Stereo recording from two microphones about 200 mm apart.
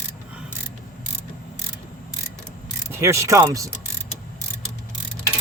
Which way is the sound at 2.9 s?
15° right (ahead or behind).